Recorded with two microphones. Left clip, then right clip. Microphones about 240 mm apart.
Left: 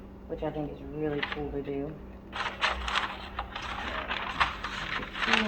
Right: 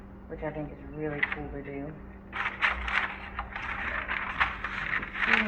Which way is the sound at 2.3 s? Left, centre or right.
Left.